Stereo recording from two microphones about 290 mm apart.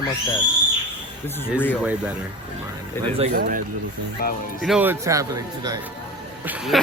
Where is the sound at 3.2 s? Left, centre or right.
Right.